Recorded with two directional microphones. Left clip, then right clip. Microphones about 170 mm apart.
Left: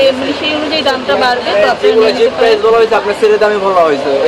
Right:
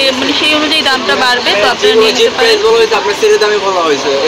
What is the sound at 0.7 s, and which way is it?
Speech, 5° left (ahead or behind).